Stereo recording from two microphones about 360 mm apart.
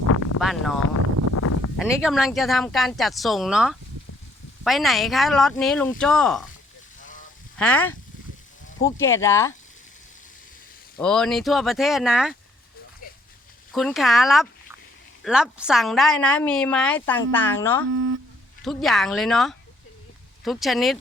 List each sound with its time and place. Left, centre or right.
0.3 s a sound: centre
1.3 s a sound: left
1.8 s a woman's voice: centre
7.5 s speech: centre
10.9 s a woman's voice: centre
13.7 s a woman's voice: centre
17.9 s speech: right
18.6 s a woman's voice: centre